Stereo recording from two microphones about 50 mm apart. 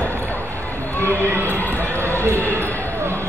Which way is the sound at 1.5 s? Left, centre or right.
Left.